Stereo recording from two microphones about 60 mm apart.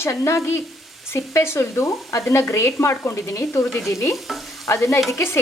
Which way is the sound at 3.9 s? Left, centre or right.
Left.